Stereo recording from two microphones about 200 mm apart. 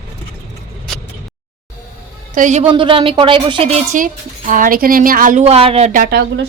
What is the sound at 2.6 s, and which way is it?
Speech, 25° right (ahead or behind).